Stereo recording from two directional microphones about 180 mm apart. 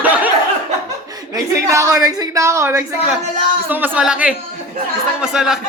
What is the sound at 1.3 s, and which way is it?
A woman's voice, 15° right (ahead or behind).